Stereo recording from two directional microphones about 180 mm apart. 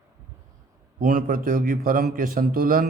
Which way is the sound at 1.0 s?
50° right (ahead or behind).